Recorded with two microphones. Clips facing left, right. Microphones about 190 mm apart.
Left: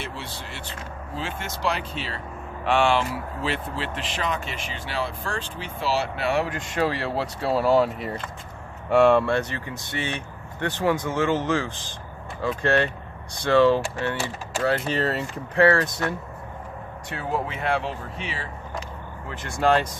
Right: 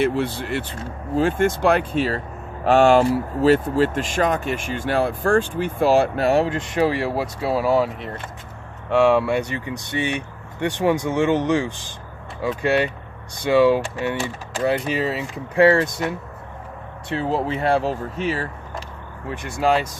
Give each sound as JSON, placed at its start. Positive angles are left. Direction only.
{"t": 0.0, "sound": "speech", "side_deg": -55}
{"t": 6.7, "sound": "speech", "side_deg": -15}
{"t": 14.8, "sound": "speech", "side_deg": -5}
{"t": 15.5, "sound": "speech", "side_deg": -20}
{"t": 17.1, "sound": "speech", "side_deg": -30}
{"t": 19.4, "sound": "speech", "side_deg": -5}